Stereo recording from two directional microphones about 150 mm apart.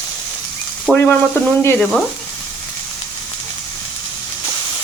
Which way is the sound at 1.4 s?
15° left (ahead or behind).